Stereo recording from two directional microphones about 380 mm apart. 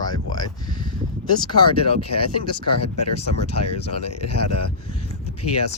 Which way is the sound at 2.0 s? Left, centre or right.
Left.